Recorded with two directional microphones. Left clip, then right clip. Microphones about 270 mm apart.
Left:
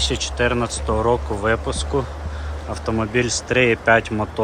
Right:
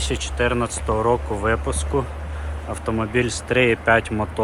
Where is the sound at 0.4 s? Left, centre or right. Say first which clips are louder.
Even; centre.